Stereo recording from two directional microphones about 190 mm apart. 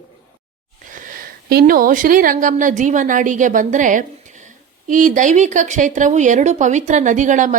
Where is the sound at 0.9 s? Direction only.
45° right (ahead or behind).